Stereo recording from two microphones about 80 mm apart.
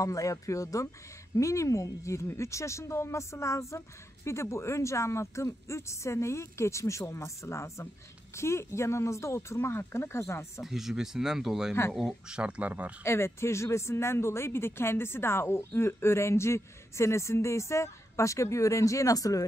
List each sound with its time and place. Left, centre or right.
0.0 s speech: left
10.6 s speech: centre
12.4 s speech: centre
13.0 s speech: left